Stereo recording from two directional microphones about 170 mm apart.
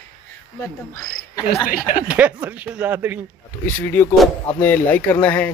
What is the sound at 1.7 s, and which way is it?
Speech, 50° left (ahead or behind).